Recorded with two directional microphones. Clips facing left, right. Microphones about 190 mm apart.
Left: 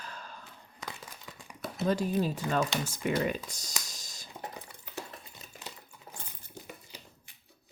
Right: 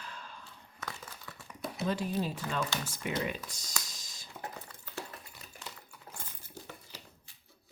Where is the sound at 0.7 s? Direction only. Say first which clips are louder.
Even; 15° left (ahead or behind).